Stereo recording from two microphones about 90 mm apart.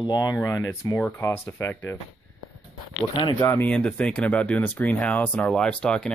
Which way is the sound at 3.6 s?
10° left (ahead or behind).